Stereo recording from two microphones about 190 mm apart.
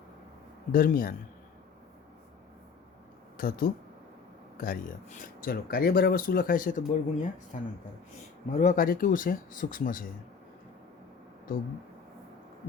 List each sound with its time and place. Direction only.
0.7 s speech: 50° left (ahead or behind)
3.3 s speech: 50° left (ahead or behind)